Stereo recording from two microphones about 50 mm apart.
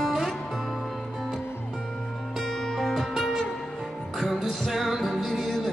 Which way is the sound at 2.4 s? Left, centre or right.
Centre.